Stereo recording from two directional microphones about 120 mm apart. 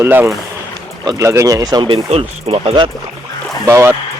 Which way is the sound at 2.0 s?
60° right (ahead or behind).